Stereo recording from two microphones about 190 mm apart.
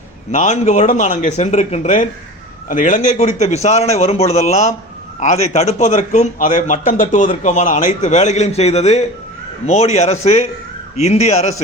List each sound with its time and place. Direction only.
0.3 s a man's voice: 40° left (ahead or behind)